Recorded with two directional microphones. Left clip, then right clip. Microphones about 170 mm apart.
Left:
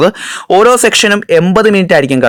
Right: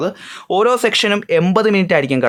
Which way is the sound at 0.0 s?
55° left (ahead or behind).